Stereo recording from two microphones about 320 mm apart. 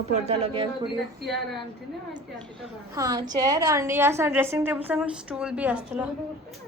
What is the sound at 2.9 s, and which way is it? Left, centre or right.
A woman's voice, centre.